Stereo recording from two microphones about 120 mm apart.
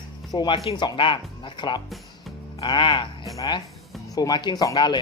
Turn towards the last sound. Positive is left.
turn(degrees=35)  # may be behind; listen again after turning